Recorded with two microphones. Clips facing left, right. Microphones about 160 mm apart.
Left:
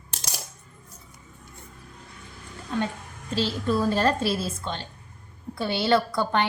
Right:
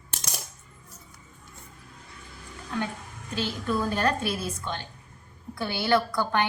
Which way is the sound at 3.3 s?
30° left (ahead or behind).